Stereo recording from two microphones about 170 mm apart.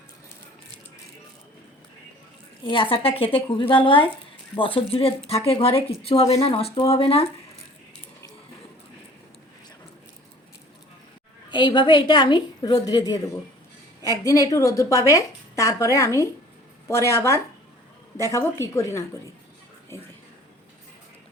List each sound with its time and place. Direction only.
2.6 s speech: 30° left (ahead or behind)
11.5 s a woman's voice: 25° left (ahead or behind)